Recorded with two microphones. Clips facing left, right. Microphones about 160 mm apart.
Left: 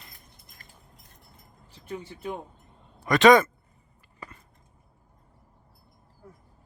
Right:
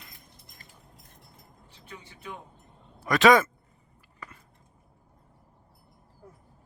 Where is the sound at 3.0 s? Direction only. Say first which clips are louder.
Left 3 dB; 5° right (ahead or behind).